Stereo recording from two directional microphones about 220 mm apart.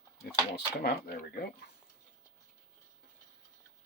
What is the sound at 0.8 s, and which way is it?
Speech, 45° left (ahead or behind).